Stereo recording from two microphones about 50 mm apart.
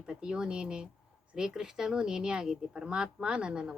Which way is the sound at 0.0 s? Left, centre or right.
Centre.